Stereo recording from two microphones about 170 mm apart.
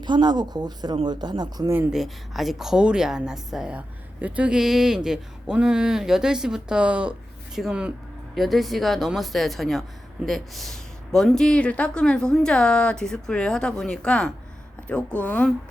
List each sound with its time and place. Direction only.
0.0 s speech: 25° right (ahead or behind)
1.9 s a woman's voice: centre (ahead or behind)